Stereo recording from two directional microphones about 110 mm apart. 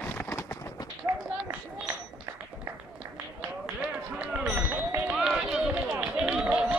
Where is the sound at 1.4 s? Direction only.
15° right (ahead or behind).